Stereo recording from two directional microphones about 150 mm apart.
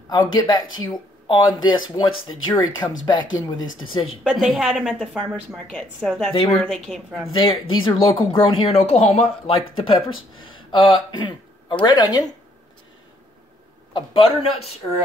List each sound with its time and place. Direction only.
0.3 s speech: 25° left (ahead or behind)
4.0 s a woman's voice: 5° right (ahead or behind)
7.3 s speech: 35° left (ahead or behind)
13.9 s speech: 35° left (ahead or behind)